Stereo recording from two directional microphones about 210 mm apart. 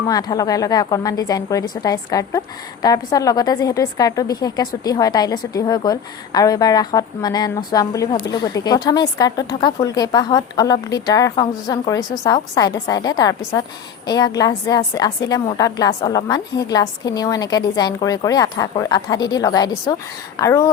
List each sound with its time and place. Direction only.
0.1 s a woman's voice: 15° left (ahead or behind)